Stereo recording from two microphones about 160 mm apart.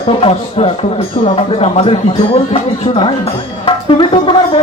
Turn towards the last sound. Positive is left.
turn(degrees=35)  # may be behind; listen again after turning